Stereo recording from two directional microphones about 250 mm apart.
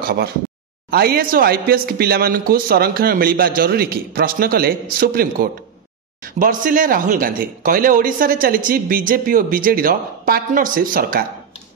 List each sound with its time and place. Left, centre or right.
0.8 s speech: right